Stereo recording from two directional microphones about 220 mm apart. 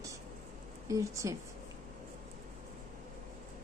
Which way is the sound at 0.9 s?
15° right (ahead or behind).